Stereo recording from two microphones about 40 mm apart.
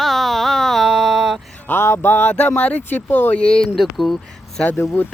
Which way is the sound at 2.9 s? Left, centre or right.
Left.